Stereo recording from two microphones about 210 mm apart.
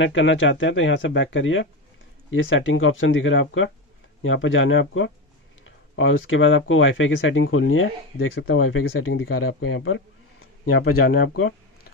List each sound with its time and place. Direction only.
0.0 s speech: 65° left (ahead or behind)
10.6 s speech: 45° left (ahead or behind)